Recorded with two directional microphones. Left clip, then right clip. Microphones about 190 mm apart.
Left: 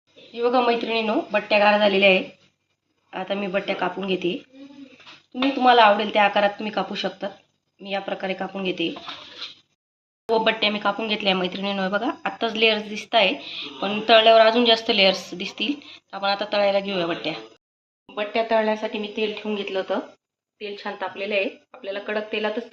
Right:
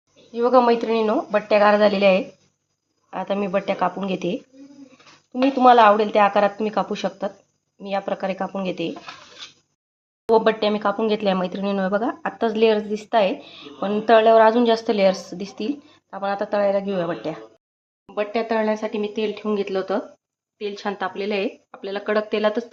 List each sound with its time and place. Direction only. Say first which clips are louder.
0.3 s speech: right 4 dB; 45° right (ahead or behind)
10.3 s speech: right 3 dB; 45° right (ahead or behind)
18.0 s speech: right 1 dB; 65° right (ahead or behind)